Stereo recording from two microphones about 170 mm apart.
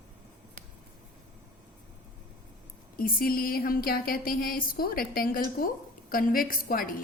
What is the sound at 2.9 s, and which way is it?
A woman's voice, 60° left (ahead or behind).